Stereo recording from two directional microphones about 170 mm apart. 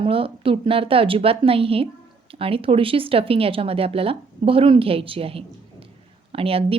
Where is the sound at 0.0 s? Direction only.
30° right (ahead or behind).